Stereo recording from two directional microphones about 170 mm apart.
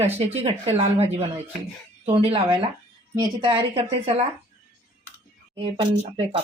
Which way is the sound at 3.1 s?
25° right (ahead or behind).